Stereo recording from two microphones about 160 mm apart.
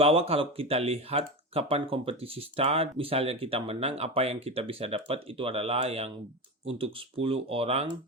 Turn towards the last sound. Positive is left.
turn(degrees=-40)  # may be behind; listen again after turning